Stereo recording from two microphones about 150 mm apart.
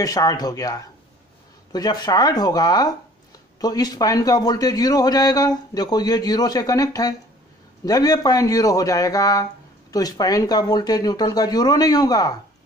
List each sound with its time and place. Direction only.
0.0 s speech: 25° left (ahead or behind)